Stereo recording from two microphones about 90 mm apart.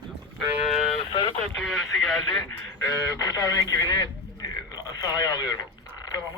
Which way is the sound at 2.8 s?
40° left (ahead or behind).